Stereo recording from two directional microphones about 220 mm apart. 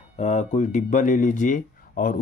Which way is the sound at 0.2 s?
30° left (ahead or behind).